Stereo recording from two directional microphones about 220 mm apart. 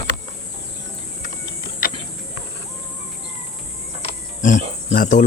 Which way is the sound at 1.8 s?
40° left (ahead or behind).